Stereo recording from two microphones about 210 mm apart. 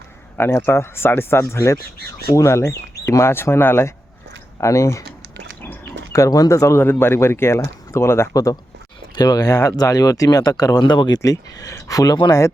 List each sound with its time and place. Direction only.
0.3 s speech: 10° left (ahead or behind)
6.1 s speech: 15° left (ahead or behind)